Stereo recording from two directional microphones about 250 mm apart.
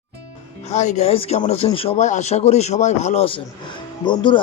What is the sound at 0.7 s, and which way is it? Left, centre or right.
Speech, left.